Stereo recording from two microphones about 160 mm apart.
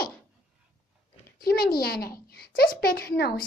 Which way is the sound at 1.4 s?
70° left (ahead or behind).